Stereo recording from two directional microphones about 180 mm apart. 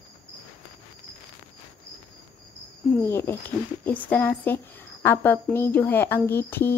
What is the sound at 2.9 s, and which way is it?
Speech, 15° left (ahead or behind).